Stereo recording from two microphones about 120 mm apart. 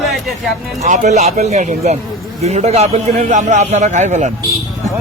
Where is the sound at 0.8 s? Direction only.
75° right (ahead or behind).